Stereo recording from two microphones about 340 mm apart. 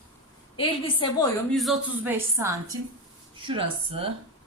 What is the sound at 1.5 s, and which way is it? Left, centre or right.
A man's voice, centre.